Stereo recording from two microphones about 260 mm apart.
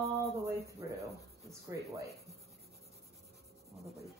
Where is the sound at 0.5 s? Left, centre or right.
Centre.